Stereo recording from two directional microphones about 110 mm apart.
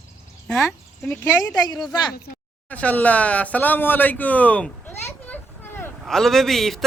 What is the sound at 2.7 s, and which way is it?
Speech, 15° left (ahead or behind).